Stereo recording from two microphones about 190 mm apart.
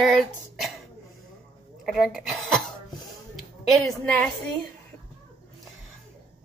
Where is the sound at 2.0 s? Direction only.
Centre (ahead or behind).